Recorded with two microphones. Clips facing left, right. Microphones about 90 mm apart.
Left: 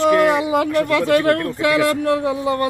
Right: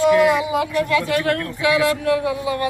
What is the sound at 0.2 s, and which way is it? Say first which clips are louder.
Speech: left 1 dB; 45° left (ahead or behind).